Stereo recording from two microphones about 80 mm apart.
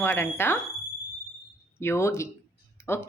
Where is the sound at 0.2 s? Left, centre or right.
Left.